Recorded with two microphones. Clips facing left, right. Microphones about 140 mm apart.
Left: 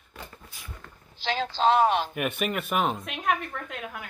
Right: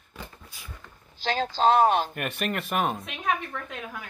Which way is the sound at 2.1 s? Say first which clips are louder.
Left 2 dB; 5° left (ahead or behind).